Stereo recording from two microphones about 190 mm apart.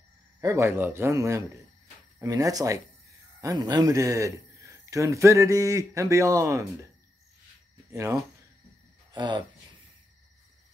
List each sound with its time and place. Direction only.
0.4 s a man's voice: 15° right (ahead or behind)
7.9 s speech: 15° right (ahead or behind)